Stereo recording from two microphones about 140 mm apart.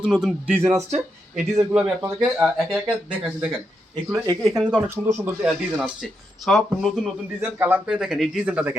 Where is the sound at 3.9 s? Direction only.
30° right (ahead or behind).